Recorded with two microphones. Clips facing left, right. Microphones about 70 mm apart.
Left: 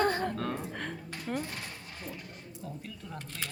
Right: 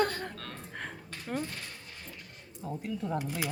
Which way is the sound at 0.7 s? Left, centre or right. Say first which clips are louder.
Left 3 dB; centre.